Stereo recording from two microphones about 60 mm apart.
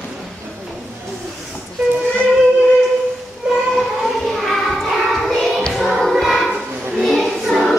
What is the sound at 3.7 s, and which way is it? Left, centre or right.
Child singing, centre.